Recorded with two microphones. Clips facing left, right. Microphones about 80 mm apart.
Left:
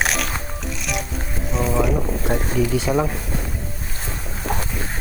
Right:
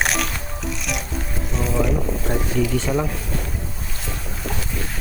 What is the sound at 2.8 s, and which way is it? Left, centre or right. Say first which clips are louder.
Speech: left 2 dB; centre.